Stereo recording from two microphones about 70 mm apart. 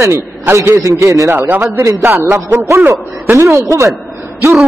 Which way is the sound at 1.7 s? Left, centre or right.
Right.